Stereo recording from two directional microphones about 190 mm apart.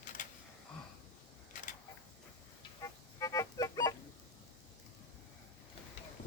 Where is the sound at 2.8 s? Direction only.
15° left (ahead or behind).